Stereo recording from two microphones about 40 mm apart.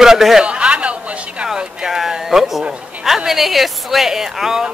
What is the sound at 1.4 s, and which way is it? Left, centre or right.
Speech, centre.